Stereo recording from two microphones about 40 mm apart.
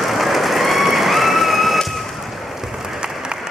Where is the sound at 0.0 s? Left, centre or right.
Centre.